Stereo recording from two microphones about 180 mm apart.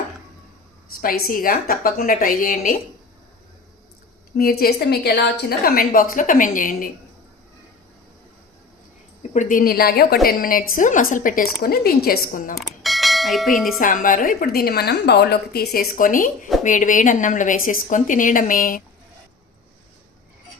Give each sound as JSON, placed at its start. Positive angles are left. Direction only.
{"t": 1.0, "sound": "a woman's voice", "side_deg": 50}
{"t": 4.4, "sound": "a woman's voice", "side_deg": 55}
{"t": 9.3, "sound": "a woman's voice", "side_deg": 45}
{"t": 12.5, "sound": "bell", "side_deg": 0}
{"t": 13.7, "sound": "a woman's voice", "side_deg": 50}